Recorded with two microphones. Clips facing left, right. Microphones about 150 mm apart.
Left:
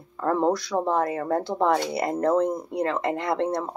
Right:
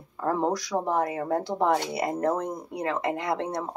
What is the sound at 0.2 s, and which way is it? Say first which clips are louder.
Speech: left 3 dB; 15° right (ahead or behind).